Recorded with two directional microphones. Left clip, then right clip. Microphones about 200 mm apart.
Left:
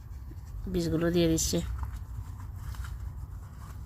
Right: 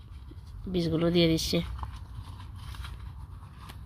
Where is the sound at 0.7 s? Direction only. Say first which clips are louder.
Right 1 dB; 20° right (ahead or behind).